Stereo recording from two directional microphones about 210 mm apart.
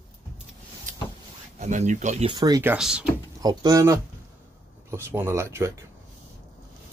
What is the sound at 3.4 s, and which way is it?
Speech, 20° right (ahead or behind).